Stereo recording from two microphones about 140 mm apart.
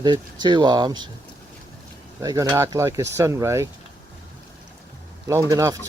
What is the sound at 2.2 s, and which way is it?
Speech, 25° right (ahead or behind).